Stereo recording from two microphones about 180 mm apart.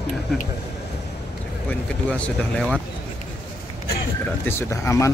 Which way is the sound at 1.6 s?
5° left (ahead or behind).